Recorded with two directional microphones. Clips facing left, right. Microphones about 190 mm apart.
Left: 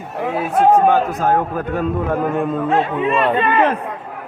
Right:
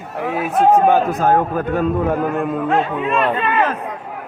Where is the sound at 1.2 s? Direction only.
45° right (ahead or behind).